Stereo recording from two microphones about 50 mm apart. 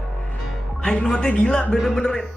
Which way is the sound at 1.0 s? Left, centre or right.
Centre.